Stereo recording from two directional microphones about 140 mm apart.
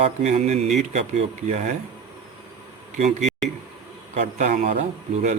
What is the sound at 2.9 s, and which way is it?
Speech, 55° right (ahead or behind).